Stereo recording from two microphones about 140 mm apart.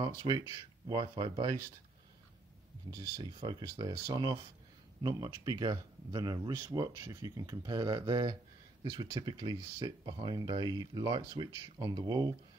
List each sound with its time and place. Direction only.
0.0 s speech: 30° right (ahead or behind)
2.9 s speech: 30° right (ahead or behind)